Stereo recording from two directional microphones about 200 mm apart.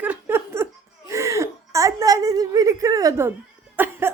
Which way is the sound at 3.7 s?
10° right (ahead or behind).